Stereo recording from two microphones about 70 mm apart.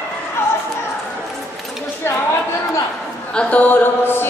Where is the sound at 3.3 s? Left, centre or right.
Left.